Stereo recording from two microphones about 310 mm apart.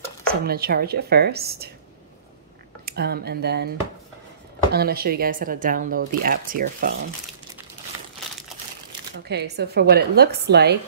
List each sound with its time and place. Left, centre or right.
0.3 s a woman's voice: right
2.8 s speech: right
4.7 s speech: right
9.3 s a woman's voice: right